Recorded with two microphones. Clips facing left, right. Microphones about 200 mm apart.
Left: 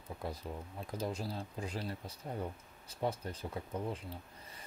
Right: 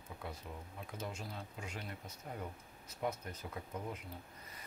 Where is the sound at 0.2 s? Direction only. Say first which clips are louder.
Left 5 dB; 35° left (ahead or behind).